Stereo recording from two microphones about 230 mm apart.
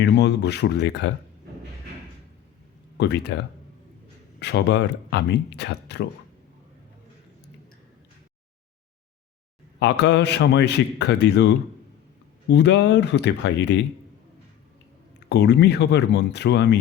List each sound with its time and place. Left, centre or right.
0.0 s speech: left
3.0 s speech: left
9.8 s speech: left
15.3 s speech: left